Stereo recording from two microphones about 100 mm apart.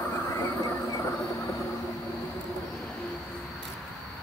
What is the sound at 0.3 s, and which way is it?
Train, 30° left (ahead or behind).